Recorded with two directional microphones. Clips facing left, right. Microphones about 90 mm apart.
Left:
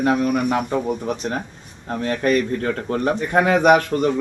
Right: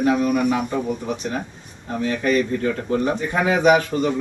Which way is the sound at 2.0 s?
50° left (ahead or behind).